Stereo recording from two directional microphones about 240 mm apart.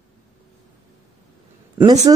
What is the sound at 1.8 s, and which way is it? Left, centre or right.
Speech, centre.